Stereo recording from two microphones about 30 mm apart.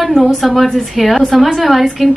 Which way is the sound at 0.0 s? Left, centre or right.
Centre.